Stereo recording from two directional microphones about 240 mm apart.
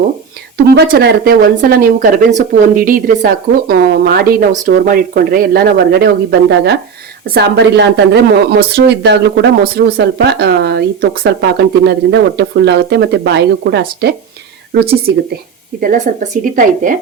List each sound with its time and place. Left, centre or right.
0.5 s speech: right
7.3 s speech: right